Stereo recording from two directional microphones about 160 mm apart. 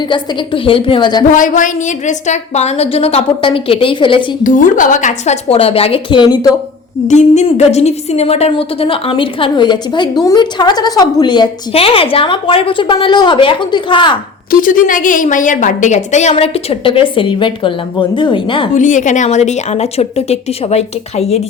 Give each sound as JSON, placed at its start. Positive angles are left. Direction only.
{"t": 0.0, "sound": "a woman's voice", "side_deg": 30}
{"t": 1.3, "sound": "a woman's voice", "side_deg": 55}
{"t": 4.4, "sound": "a woman's voice", "side_deg": 55}
{"t": 7.1, "sound": "a woman's voice", "side_deg": 45}
{"t": 14.5, "sound": "a woman's voice", "side_deg": 55}
{"t": 18.7, "sound": "a woman's voice", "side_deg": 50}